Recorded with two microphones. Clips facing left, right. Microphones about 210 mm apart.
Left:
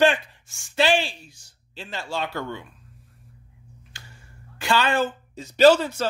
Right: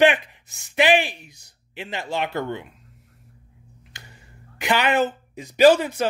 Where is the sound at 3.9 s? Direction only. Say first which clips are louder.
Right 2 dB; 20° right (ahead or behind).